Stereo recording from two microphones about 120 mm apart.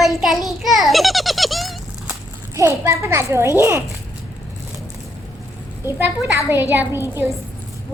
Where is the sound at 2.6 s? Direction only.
25° right (ahead or behind).